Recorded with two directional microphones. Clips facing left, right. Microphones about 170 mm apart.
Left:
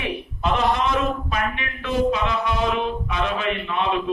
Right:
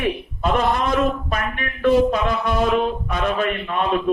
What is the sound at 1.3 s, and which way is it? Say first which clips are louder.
A man's voice: right 1 dB; 50° right (ahead or behind).